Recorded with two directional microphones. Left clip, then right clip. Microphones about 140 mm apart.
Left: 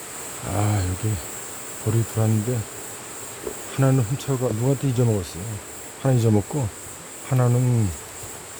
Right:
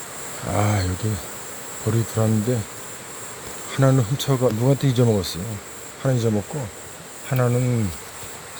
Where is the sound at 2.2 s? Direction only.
10° right (ahead or behind).